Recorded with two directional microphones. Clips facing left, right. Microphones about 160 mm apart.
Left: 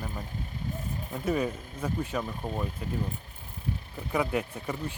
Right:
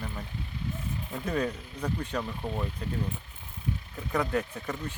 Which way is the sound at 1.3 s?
5° left (ahead or behind).